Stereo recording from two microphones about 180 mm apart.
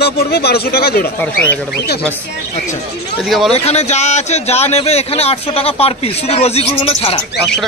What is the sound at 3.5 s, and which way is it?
Speech, 35° left (ahead or behind).